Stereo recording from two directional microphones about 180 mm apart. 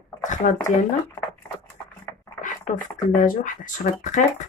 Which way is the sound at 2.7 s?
45° left (ahead or behind).